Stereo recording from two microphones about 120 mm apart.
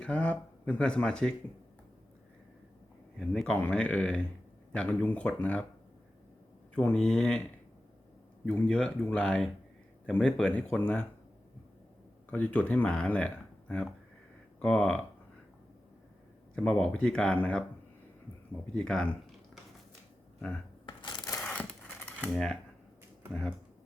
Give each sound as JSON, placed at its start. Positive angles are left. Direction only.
{"t": 0.0, "sound": "speech", "side_deg": 10}
{"t": 3.2, "sound": "speech", "side_deg": 5}
{"t": 6.7, "sound": "speech", "side_deg": 10}
{"t": 8.4, "sound": "speech", "side_deg": 10}
{"t": 12.3, "sound": "speech", "side_deg": 10}
{"t": 16.6, "sound": "speech", "side_deg": 5}
{"t": 18.7, "sound": "speech", "side_deg": 5}
{"t": 20.8, "sound": "a sound", "side_deg": 40}
{"t": 21.3, "sound": "a sound", "side_deg": 10}
{"t": 23.3, "sound": "speech", "side_deg": 10}